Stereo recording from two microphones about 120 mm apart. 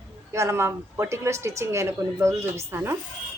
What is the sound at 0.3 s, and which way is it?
A woman's voice, 25° right (ahead or behind).